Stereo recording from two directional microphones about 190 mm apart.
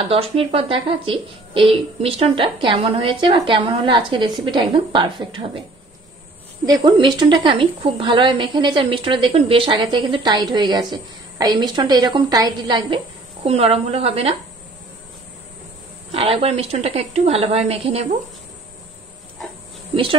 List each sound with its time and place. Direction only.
0.1 s speech: 30° right (ahead or behind)
6.6 s speech: 20° right (ahead or behind)
16.1 s a woman's voice: 30° right (ahead or behind)